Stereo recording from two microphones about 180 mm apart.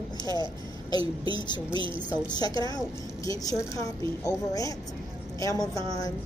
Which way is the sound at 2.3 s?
25° left (ahead or behind).